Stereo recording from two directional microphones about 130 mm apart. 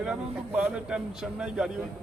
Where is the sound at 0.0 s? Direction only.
10° right (ahead or behind).